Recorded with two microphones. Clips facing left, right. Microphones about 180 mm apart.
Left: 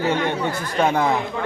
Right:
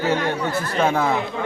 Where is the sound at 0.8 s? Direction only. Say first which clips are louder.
Left 1 dB; centre (ahead or behind).